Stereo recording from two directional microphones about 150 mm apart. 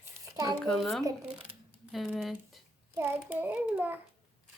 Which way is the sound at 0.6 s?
5° left (ahead or behind).